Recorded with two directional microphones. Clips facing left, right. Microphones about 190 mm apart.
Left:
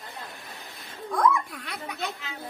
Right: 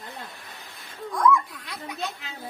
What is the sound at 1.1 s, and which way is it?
Speech, 60° left (ahead or behind).